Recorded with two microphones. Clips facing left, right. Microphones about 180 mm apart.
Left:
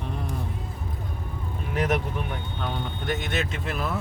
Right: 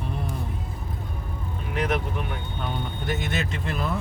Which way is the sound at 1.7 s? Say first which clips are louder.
Left 1 dB; 40° left (ahead or behind).